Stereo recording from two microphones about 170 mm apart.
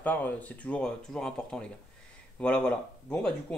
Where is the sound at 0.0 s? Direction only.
10° left (ahead or behind).